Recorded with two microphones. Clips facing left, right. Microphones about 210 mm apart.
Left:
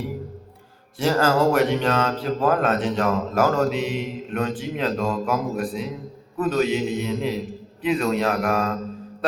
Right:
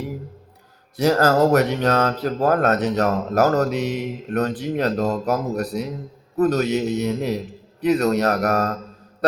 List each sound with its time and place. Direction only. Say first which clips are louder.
1.2 s speech: right 1 dB; 40° right (ahead or behind)
4.3 s speech: right 4 dB; 55° right (ahead or behind)
4.5 s a man's voice: right 3 dB; 40° right (ahead or behind)